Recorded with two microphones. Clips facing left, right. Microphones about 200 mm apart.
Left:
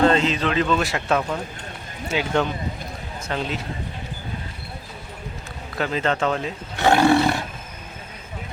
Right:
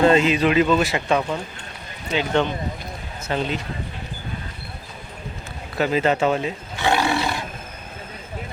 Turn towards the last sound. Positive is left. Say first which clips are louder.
# left 5 dB
turn(degrees=50)  # may be behind; listen again after turning